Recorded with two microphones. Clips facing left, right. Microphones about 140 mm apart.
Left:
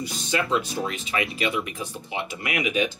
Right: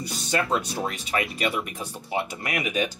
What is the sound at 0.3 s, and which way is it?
Speech, 45° right (ahead or behind).